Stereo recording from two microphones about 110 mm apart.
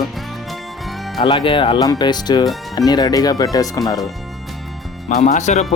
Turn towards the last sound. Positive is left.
turn(degrees=90)